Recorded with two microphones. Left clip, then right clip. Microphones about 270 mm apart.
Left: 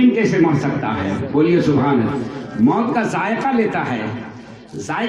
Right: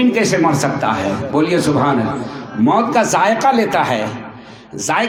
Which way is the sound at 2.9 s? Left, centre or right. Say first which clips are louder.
Right 6 dB; right.